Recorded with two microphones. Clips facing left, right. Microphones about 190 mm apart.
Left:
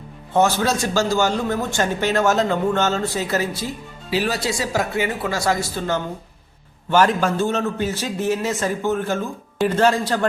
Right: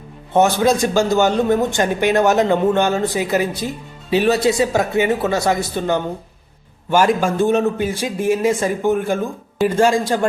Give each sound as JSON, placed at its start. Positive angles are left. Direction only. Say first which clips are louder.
{"t": 0.3, "sound": "a man's voice", "louder": "right 4 dB", "side_deg": -15}